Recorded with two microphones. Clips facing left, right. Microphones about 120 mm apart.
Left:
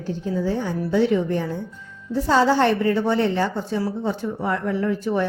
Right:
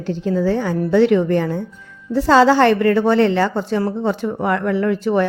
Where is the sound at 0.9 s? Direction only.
75° right (ahead or behind).